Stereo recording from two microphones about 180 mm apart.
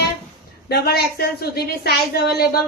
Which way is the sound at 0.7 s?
60° left (ahead or behind).